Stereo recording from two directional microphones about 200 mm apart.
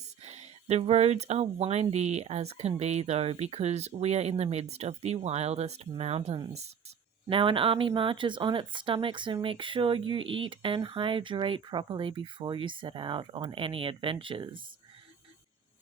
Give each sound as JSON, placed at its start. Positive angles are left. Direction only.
{"t": 0.2, "sound": "speech", "side_deg": -35}